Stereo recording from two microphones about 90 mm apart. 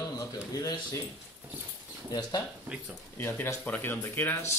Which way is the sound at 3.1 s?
25° left (ahead or behind).